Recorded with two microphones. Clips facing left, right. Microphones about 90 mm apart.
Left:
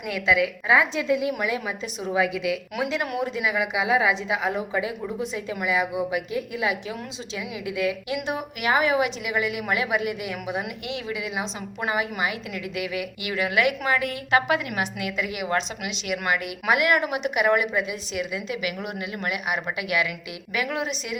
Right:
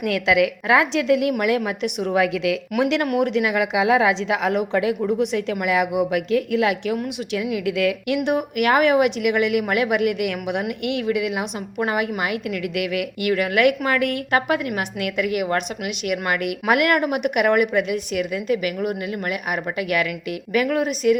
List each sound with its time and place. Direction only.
0.1 s a woman's voice: 90° right
6.9 s a woman's voice: 65° right (ahead or behind); by 21.2 s 50° right (ahead or behind)